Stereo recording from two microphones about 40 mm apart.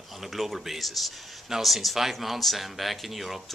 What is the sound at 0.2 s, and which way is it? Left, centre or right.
Speech, centre.